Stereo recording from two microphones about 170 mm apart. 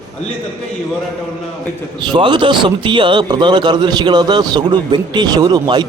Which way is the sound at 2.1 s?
30° right (ahead or behind).